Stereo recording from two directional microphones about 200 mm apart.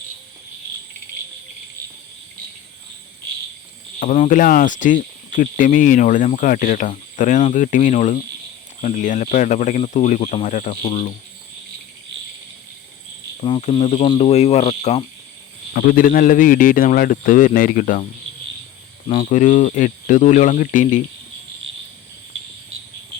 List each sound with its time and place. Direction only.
4.0 s speech: 40° left (ahead or behind)
13.4 s speech: 30° left (ahead or behind)
15.7 s a man's voice: 45° left (ahead or behind)
19.0 s speech: 35° left (ahead or behind)
22.7 s cricket: 80° right